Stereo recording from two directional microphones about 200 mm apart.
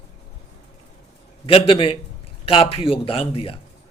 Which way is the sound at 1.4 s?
25° left (ahead or behind).